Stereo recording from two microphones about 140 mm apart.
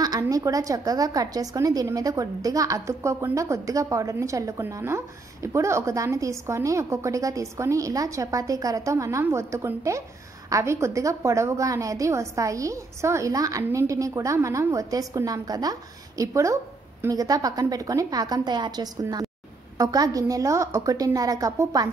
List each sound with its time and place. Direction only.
0.0 s a woman's voice: 25° right (ahead or behind)